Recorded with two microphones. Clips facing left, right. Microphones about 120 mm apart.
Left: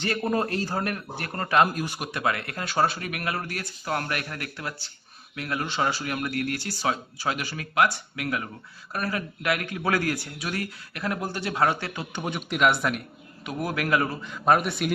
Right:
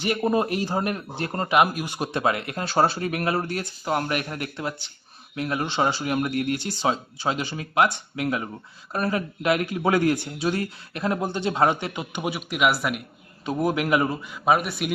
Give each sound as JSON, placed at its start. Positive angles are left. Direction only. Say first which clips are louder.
{"t": 0.0, "sound": "a man's voice", "louder": "right 3 dB", "side_deg": -15}
{"t": 2.0, "sound": "speech", "louder": "right 7 dB", "side_deg": -25}
{"t": 13.4, "sound": "speech", "louder": "right 5 dB", "side_deg": -25}
{"t": 14.3, "sound": "a man's voice", "louder": "even", "side_deg": -5}